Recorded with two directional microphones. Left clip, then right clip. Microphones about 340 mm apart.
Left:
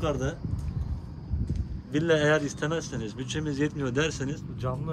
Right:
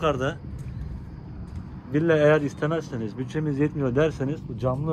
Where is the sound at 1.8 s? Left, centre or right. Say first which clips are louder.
Right 4 dB; centre.